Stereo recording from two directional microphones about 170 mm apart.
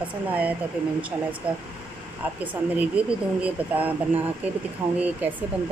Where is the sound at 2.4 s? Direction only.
10° right (ahead or behind).